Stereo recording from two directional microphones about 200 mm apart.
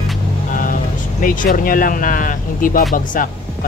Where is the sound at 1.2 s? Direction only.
40° left (ahead or behind).